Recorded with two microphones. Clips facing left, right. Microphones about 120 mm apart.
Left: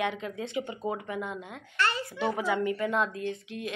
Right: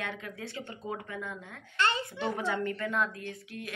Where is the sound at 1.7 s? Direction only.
25° right (ahead or behind).